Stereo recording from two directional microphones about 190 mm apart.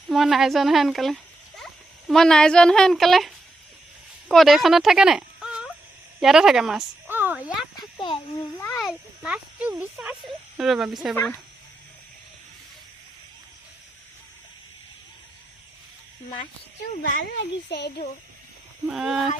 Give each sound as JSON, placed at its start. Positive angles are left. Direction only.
{"t": 0.1, "sound": "speech", "side_deg": 0}
{"t": 7.8, "sound": "a child's voice", "side_deg": 25}
{"t": 8.8, "sound": "speech", "side_deg": -5}
{"t": 17.0, "sound": "speech", "side_deg": 45}
{"t": 17.7, "sound": "a child's voice", "side_deg": 60}
{"t": 18.9, "sound": "speech", "side_deg": -5}